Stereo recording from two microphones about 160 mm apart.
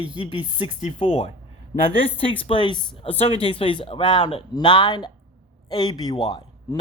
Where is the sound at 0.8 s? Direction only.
40° left (ahead or behind).